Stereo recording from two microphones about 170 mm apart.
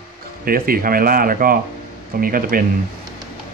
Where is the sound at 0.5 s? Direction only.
60° right (ahead or behind).